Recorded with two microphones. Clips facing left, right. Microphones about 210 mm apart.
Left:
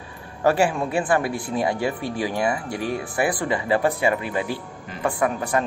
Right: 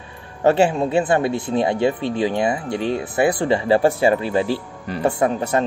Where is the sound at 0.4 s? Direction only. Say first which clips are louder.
Right 4 dB; 25° right (ahead or behind).